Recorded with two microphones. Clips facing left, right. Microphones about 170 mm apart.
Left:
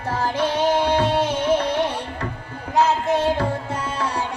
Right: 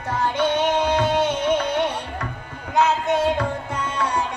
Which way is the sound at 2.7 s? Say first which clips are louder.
Left 1 dB; 30° left (ahead or behind).